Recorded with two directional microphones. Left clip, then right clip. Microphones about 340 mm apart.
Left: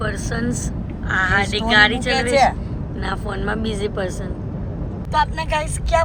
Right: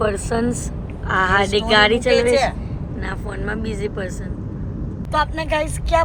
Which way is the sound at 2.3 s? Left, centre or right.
Centre.